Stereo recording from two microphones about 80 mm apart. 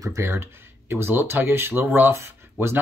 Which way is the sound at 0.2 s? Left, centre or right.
Right.